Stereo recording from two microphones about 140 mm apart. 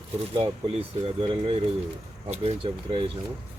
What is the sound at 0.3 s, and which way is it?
Speech, 40° right (ahead or behind).